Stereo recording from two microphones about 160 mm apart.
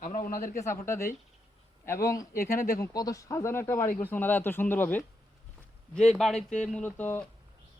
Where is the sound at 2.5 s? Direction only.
65° left (ahead or behind).